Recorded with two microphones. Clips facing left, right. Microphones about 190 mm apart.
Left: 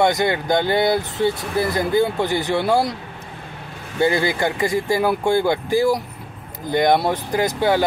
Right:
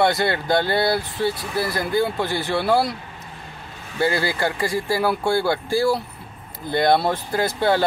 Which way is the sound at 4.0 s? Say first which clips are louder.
Left 3 dB; 20° left (ahead or behind).